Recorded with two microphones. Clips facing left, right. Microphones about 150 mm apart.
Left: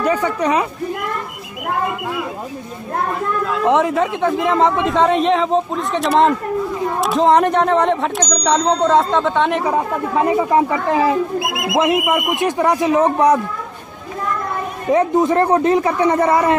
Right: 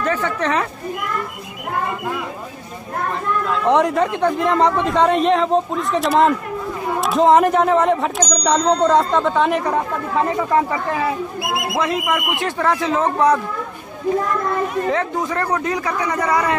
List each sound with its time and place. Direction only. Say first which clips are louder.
0.0 s speech: left 3 dB; 10° left (ahead or behind)
3.6 s speech: left 1 dB; centre (ahead or behind)
10.5 s speech: left 3 dB; 20° left (ahead or behind)
14.9 s speech: left 6 dB; 20° left (ahead or behind)